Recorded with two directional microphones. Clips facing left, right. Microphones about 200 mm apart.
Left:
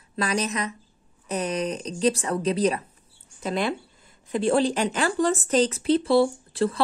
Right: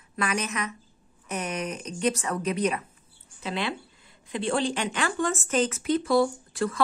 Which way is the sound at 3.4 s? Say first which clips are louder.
Left 5 dB; 45° left (ahead or behind).